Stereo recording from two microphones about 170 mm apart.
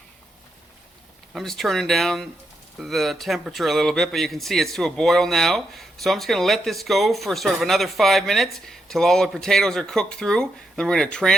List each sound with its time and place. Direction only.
1.3 s speech: centre (ahead or behind)